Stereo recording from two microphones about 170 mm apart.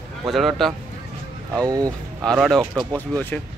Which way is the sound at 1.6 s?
20° right (ahead or behind).